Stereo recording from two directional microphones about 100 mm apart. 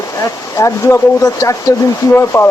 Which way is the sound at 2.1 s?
25° left (ahead or behind).